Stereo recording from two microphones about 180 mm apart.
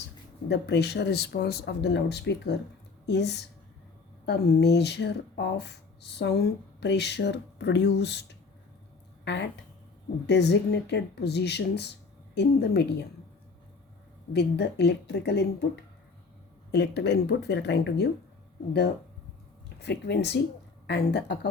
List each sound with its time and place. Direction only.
0.4 s speech: 70° left (ahead or behind)
9.2 s speech: 75° left (ahead or behind)
14.3 s speech: 65° left (ahead or behind)
19.8 s speech: 70° left (ahead or behind)